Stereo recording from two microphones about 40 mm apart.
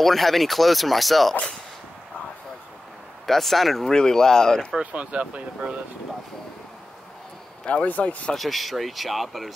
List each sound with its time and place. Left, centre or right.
0.0 s speech: centre
3.3 s speech: centre
3.9 s speech: centre
4.9 s speech: right
7.8 s speech: left
8.4 s speech: centre